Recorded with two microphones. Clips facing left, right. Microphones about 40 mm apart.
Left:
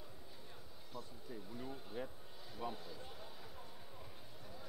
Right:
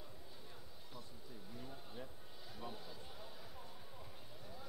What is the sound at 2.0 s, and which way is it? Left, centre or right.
Speech, left.